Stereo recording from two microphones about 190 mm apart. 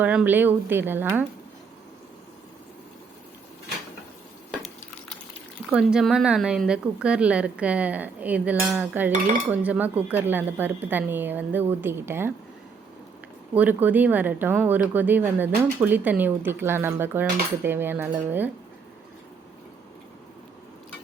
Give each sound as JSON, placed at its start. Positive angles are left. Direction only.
{"t": 0.0, "sound": "speech", "side_deg": -5}
{"t": 5.7, "sound": "a woman's voice", "side_deg": -5}
{"t": 13.5, "sound": "speech", "side_deg": -10}